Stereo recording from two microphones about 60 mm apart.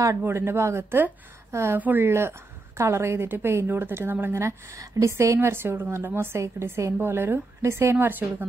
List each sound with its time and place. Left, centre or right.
0.2 s a woman's voice: right
1.8 s speech: right
2.0 s a woman's voice: right
5.1 s a woman's voice: right
5.5 s a woman's voice: right